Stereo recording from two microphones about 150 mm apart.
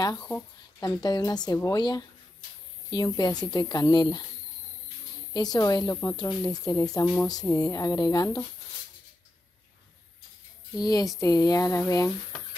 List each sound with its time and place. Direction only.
0.0 s speech: 25° left (ahead or behind)
3.2 s speech: 25° left (ahead or behind)
5.3 s speech: 25° left (ahead or behind)
10.8 s speech: 25° left (ahead or behind)